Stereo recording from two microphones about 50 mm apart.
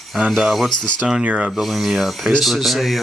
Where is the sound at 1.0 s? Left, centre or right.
Centre.